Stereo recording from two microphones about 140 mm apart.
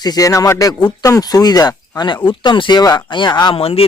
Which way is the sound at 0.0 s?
25° left (ahead or behind).